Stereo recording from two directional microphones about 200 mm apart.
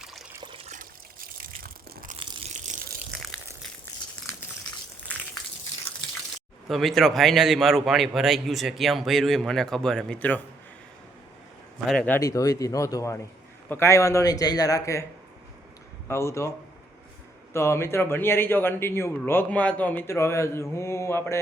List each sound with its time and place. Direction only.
0.0 s water: centre (ahead or behind)
0.3 s water: 25° right (ahead or behind); by 2.1 s 45° right (ahead or behind)
3.1 s a sound: 5° right (ahead or behind)
6.7 s a man's voice: centre (ahead or behind)
11.9 s speech: 5° left (ahead or behind)
16.0 s speech: 15° left (ahead or behind)
17.5 s speech: 15° left (ahead or behind)